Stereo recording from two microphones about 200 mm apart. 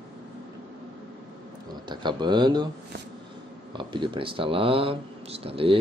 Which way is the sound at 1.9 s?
20° right (ahead or behind).